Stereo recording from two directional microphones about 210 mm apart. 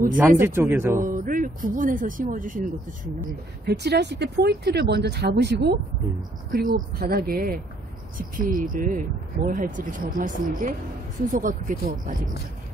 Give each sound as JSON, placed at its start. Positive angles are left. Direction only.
{"t": 0.4, "sound": "speech", "side_deg": -10}
{"t": 1.0, "sound": "speech", "side_deg": -40}
{"t": 3.2, "sound": "speech", "side_deg": -50}